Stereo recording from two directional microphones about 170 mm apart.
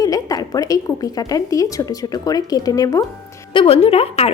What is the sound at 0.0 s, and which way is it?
A woman's voice, 20° left (ahead or behind).